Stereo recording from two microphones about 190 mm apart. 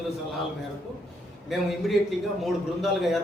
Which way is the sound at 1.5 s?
Centre (ahead or behind).